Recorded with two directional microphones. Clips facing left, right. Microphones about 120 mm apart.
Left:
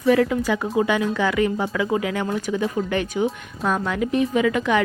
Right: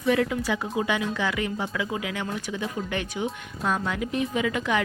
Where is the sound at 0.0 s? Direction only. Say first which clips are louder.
Left 5 dB; 35° left (ahead or behind).